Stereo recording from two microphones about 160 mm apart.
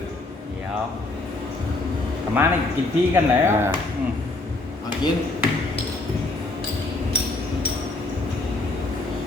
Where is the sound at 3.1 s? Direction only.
15° right (ahead or behind).